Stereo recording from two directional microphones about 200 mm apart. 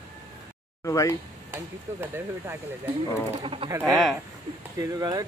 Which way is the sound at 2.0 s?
10° right (ahead or behind).